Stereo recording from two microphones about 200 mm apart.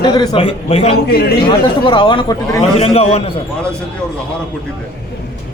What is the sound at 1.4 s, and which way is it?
A man's voice, 25° left (ahead or behind).